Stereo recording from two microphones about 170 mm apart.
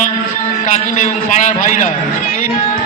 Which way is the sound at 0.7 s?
45° left (ahead or behind).